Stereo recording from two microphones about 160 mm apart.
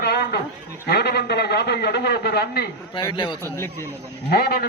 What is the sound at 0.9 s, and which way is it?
A man's voice, 90° left.